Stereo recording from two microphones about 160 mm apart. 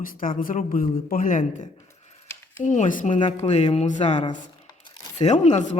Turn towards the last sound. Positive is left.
turn(degrees=50)  # may be behind; listen again after turning